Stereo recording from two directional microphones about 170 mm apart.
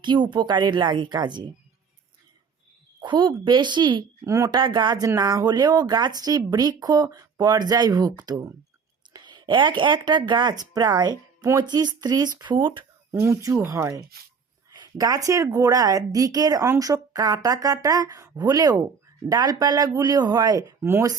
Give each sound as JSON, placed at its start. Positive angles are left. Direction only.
{"t": 0.0, "sound": "speech", "side_deg": -25}
{"t": 3.0, "sound": "speech", "side_deg": -25}
{"t": 13.1, "sound": "speech", "side_deg": -15}